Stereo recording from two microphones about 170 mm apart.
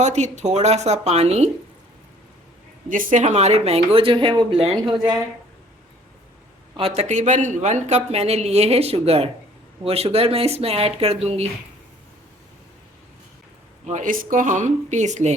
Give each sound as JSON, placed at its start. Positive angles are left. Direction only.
{"t": 0.0, "sound": "speech", "side_deg": -40}
{"t": 2.9, "sound": "speech", "side_deg": -50}
{"t": 6.7, "sound": "speech", "side_deg": -35}
{"t": 13.8, "sound": "speech", "side_deg": -50}